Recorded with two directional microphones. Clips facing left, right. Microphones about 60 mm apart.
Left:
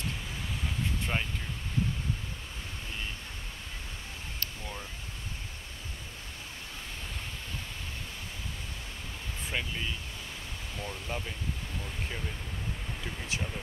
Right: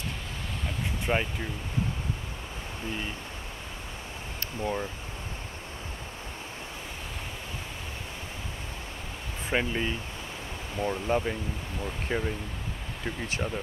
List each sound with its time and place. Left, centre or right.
1.1 s speech: right
9.5 s speech: right
10.8 s speech: right